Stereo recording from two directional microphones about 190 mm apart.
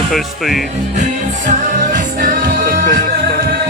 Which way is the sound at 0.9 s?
40° right (ahead or behind).